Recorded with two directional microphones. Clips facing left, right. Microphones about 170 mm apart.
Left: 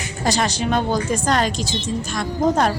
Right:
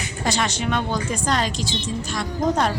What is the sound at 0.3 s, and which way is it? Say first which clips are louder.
A woman's voice: left 3 dB; 35° left (ahead or behind).